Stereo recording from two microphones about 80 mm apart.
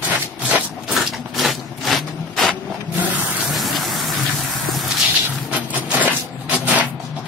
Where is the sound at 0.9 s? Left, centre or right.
Centre.